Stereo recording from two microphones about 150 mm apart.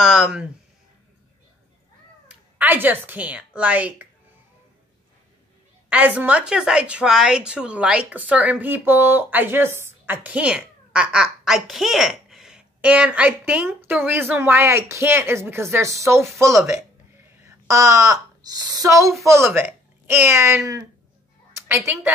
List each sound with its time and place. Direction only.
0.0 s speech: 5° right (ahead or behind)
2.2 s speech: 10° right (ahead or behind)
5.9 s a woman's voice: 10° right (ahead or behind)